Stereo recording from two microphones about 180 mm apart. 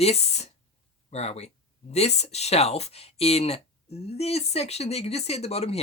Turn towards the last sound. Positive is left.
turn(degrees=35)  # may be behind; listen again after turning